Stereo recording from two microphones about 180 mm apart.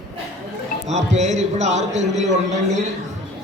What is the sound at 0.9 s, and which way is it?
A man's voice, 40° right (ahead or behind).